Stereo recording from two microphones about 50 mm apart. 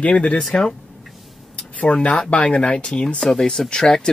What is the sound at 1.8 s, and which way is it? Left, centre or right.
Speech, left.